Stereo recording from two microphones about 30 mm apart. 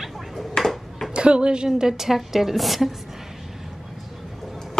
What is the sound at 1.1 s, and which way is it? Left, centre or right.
A woman's voice, right.